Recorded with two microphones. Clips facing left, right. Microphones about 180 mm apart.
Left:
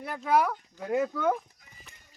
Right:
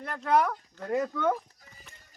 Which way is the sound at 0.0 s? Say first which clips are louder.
Even; 5° left (ahead or behind).